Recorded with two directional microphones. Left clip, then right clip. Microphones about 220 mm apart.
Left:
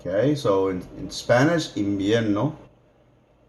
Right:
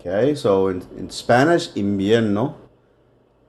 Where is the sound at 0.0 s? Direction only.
40° right (ahead or behind).